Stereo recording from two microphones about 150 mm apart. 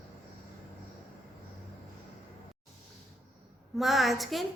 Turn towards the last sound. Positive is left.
turn(degrees=0)  # may be behind; listen again after turning